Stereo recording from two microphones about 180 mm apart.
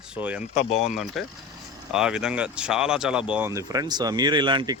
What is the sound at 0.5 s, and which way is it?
Speech, 35° left (ahead or behind).